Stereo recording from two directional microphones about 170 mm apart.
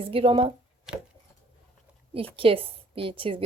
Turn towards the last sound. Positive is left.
turn(degrees=-30)  # may be behind; listen again after turning